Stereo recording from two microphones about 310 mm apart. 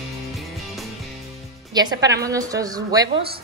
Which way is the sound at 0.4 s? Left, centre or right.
Centre.